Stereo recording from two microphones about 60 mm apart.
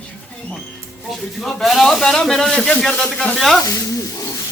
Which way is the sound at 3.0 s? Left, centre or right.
Centre.